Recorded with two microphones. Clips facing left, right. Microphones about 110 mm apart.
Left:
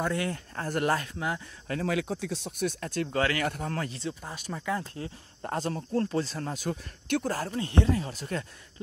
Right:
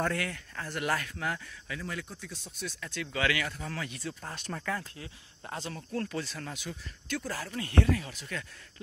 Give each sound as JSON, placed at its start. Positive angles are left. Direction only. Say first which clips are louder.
{"t": 0.1, "sound": "speech", "louder": "left 4 dB", "side_deg": 25}
{"t": 0.6, "sound": "speech", "louder": "left 7 dB", "side_deg": 45}
{"t": 0.8, "sound": "speech", "louder": "left 2 dB", "side_deg": 30}
{"t": 1.7, "sound": "speech", "louder": "left 10 dB", "side_deg": 75}
{"t": 2.6, "sound": "speech", "louder": "left 8 dB", "side_deg": 50}
{"t": 3.4, "sound": "speech", "louder": "left 6 dB", "side_deg": 50}
{"t": 4.2, "sound": "speech", "louder": "left 1 dB", "side_deg": 5}
{"t": 4.9, "sound": "speech", "louder": "left 8 dB", "side_deg": 40}
{"t": 5.8, "sound": "speech", "louder": "left 4 dB", "side_deg": 30}
{"t": 6.7, "sound": "speech", "louder": "left 9 dB", "side_deg": 60}
{"t": 7.5, "sound": "speech", "louder": "even", "side_deg": 25}